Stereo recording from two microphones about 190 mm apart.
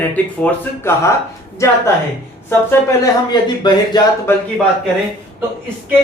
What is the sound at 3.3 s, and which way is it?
Speech, 20° left (ahead or behind).